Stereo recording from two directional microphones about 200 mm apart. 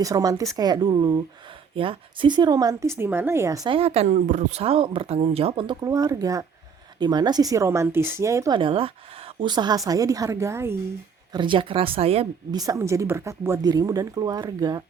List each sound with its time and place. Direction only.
0.0 s a woman's voice: 15° right (ahead or behind)
11.3 s a woman's voice: 25° right (ahead or behind)